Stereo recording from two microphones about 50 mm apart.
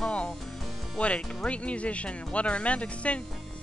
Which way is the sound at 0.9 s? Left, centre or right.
Left.